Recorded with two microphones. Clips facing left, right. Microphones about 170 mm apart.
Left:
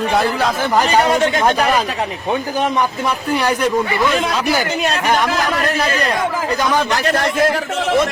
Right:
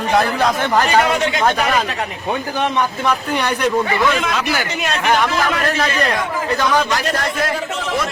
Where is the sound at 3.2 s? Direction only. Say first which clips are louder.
Left 2 dB; 10° left (ahead or behind).